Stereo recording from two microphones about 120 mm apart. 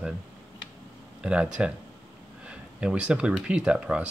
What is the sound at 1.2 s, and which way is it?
Speech, 10° right (ahead or behind).